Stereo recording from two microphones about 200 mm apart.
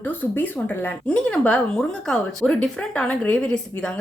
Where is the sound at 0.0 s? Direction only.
10° left (ahead or behind).